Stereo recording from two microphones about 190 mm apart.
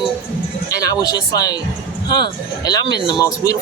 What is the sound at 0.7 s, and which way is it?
Speech, 20° left (ahead or behind).